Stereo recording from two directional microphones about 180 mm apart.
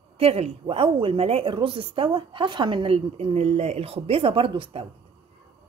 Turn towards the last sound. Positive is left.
turn(degrees=-30)  # may be behind; listen again after turning